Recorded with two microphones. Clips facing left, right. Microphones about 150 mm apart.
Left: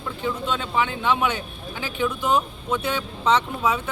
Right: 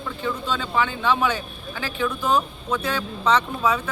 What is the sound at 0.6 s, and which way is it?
Speech, 20° left (ahead or behind).